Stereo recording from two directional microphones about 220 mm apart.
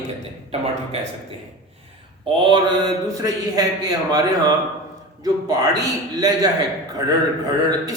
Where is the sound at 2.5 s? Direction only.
20° right (ahead or behind).